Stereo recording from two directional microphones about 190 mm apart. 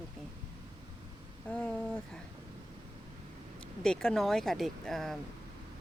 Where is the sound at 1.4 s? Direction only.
5° left (ahead or behind).